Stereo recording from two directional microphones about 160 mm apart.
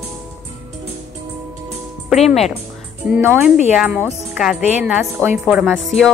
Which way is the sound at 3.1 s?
10° right (ahead or behind).